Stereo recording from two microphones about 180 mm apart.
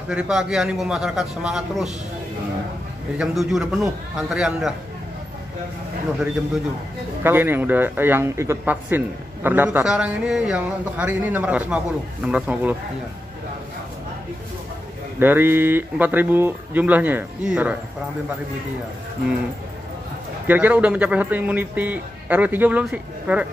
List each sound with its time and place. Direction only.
0.1 s a man's voice: 5° right (ahead or behind)
3.2 s a man's voice: centre (ahead or behind)
7.2 s a man's voice: 10° right (ahead or behind)
15.1 s a man's voice: 10° right (ahead or behind)
20.4 s a man's voice: 10° right (ahead or behind)